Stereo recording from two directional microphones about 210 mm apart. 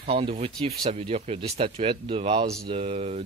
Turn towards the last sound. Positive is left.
turn(degrees=-30)  # may be behind; listen again after turning